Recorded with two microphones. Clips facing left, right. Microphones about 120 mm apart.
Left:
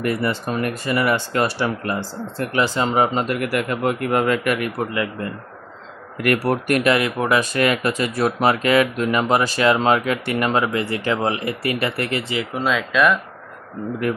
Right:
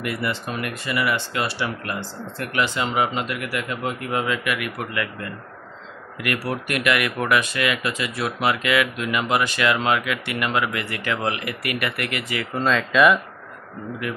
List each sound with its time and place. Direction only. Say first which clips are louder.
0.0 s speech: left 5 dB; 40° left (ahead or behind)
1.9 s speech: left 5 dB; 30° left (ahead or behind); by 4.4 s 55° left (ahead or behind)
4.5 s speech: left 5 dB; 35° left (ahead or behind)
4.9 s speech: left 4 dB; 25° left (ahead or behind)
6.1 s speech: left 7 dB; 45° left (ahead or behind)
6.9 s speech: left 1 dB; 25° left (ahead or behind)
7.4 s speech: left 5 dB; 40° left (ahead or behind)
12.5 s speech: right 1 dB; 5° left (ahead or behind)